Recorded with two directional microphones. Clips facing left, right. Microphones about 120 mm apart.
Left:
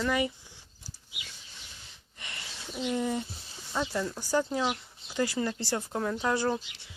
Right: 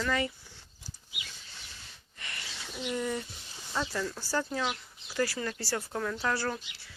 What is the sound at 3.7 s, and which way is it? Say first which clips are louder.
Speech: left 2 dB; 20° left (ahead or behind).